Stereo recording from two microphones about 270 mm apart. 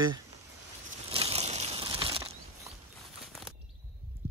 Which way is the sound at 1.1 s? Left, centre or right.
Right.